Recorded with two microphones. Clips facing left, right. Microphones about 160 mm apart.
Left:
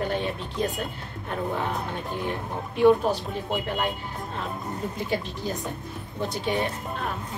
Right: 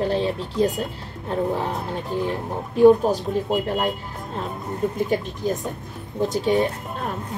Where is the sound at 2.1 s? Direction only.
35° right (ahead or behind).